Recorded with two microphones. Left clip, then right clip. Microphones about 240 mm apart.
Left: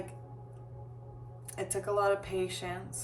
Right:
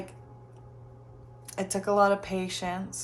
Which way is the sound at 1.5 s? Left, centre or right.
Right.